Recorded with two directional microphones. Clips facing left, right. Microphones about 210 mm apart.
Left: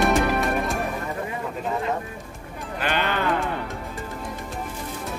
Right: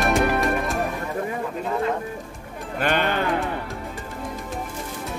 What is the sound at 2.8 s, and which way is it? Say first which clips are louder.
Music: right 3 dB; 50° right (ahead or behind).